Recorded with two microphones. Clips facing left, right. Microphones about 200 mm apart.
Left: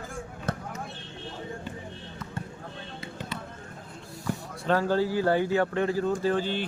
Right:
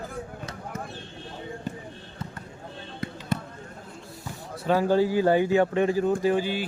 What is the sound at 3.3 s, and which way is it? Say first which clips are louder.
Basketball bounce: right 10 dB; 45° right (ahead or behind).